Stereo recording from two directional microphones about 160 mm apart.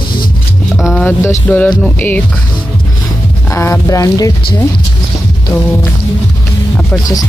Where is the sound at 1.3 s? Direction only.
10° left (ahead or behind).